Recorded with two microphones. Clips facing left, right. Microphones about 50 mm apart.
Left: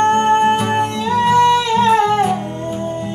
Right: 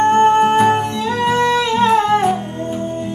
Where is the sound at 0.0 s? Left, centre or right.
Left.